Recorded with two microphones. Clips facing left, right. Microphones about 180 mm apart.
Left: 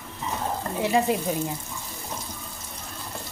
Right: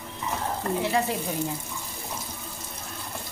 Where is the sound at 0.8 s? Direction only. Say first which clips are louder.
Left 6 dB; 15° left (ahead or behind).